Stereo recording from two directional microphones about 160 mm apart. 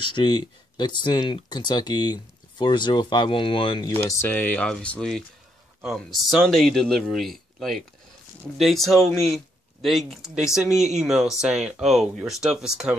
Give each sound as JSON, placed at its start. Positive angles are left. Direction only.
{"t": 0.0, "sound": "speech", "side_deg": 30}
{"t": 4.1, "sound": "speech", "side_deg": 15}